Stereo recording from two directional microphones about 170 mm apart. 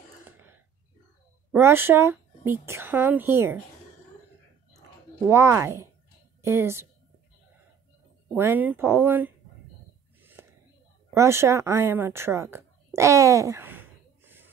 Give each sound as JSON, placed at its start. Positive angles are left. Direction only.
{"t": 0.3, "sound": "throat clearing", "side_deg": -15}
{"t": 1.5, "sound": "speech", "side_deg": -15}
{"t": 5.2, "sound": "speech", "side_deg": -15}
{"t": 8.4, "sound": "speech", "side_deg": -10}
{"t": 10.4, "sound": "whispering", "side_deg": -15}
{"t": 11.1, "sound": "speech", "side_deg": -15}